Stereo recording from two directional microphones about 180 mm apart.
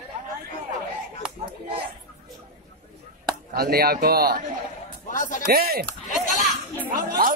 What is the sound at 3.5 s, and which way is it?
Speech, 60° right (ahead or behind).